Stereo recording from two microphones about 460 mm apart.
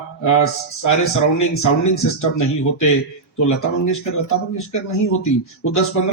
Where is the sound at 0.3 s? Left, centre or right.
Left.